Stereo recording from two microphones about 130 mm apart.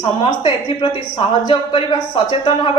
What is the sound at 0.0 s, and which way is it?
A woman's voice, 40° left (ahead or behind).